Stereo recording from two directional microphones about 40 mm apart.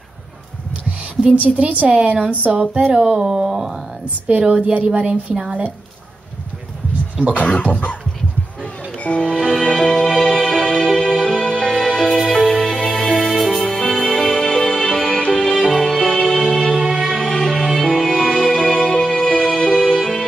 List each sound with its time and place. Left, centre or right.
1.2 s a woman's voice: right
2.9 s speech: centre
4.3 s a woman's voice: right
7.3 s speech: left
8.9 s music: left
9.8 s music: centre
11.2 s music: centre
12.1 s music: centre
16.9 s music: centre
17.2 s music: centre